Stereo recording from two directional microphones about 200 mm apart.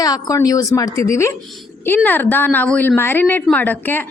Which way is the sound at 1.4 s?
Centre (ahead or behind).